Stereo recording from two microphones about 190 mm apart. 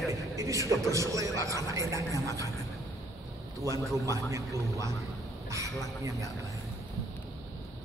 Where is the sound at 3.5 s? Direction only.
15° right (ahead or behind).